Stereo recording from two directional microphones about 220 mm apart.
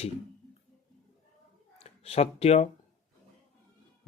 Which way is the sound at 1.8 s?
30° left (ahead or behind).